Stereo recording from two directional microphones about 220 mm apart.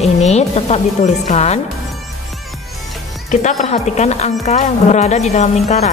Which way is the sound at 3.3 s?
35° left (ahead or behind).